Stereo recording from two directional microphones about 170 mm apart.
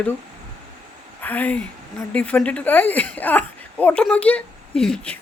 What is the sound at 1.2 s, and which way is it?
Speech, 10° left (ahead or behind).